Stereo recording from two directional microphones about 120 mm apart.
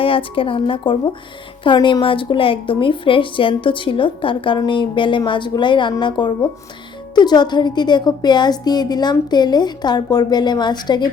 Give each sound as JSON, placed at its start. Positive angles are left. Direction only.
{"t": 0.0, "sound": "a woman's voice", "side_deg": 50}